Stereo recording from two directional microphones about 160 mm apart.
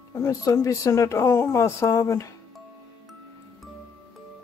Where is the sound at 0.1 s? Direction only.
20° left (ahead or behind).